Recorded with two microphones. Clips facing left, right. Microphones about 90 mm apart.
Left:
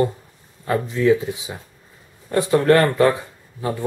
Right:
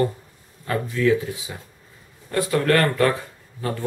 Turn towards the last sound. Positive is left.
turn(degrees=15)  # may be behind; listen again after turning